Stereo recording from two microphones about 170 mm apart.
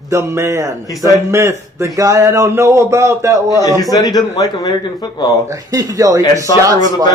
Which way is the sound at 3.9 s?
25° left (ahead or behind).